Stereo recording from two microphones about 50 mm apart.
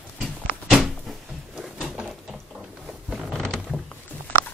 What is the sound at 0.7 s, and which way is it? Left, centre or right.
Cupboard open or close, centre.